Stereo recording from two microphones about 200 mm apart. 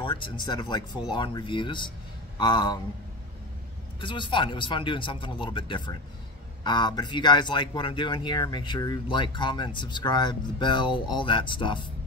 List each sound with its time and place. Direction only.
0.0 s speech: 25° left (ahead or behind)
4.0 s speech: 25° left (ahead or behind)